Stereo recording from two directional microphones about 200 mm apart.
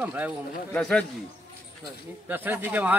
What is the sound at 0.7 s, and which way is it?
Speech, 5° left (ahead or behind).